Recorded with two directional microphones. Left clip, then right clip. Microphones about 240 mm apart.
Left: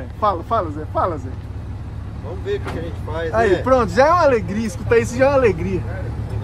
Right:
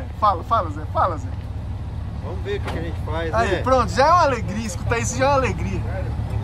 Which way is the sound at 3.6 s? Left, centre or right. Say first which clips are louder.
Even; centre.